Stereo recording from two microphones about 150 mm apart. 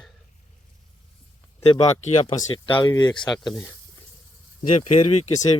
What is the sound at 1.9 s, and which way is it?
Speech, 50° left (ahead or behind).